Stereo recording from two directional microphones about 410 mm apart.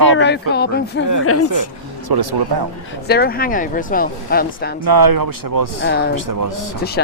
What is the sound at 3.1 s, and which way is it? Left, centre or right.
Speech, left.